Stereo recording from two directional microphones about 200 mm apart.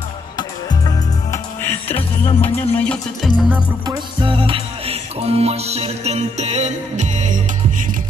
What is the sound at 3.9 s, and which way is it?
Music, 25° right (ahead or behind).